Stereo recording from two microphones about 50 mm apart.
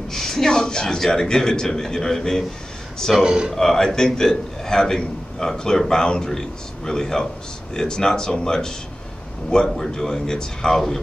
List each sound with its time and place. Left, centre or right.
0.1 s a man's voice: centre
3.3 s speech: centre
3.5 s a man's voice: centre